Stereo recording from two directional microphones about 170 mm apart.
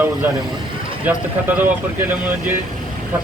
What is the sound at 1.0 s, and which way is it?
Speech, 10° right (ahead or behind).